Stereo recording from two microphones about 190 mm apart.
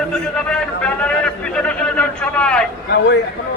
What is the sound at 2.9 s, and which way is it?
Speech, 65° left (ahead or behind).